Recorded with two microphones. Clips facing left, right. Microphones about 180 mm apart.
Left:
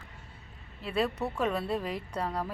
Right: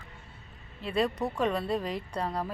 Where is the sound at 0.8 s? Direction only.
5° left (ahead or behind).